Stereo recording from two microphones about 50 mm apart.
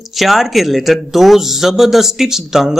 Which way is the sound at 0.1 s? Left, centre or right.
Centre.